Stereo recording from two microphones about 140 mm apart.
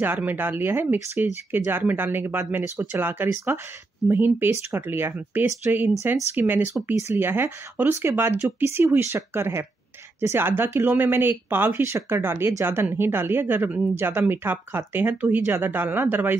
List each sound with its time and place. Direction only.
0.0 s speech: 15° right (ahead or behind)